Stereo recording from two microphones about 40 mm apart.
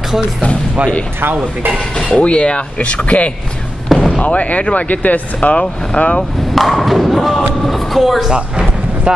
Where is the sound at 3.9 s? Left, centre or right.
Centre.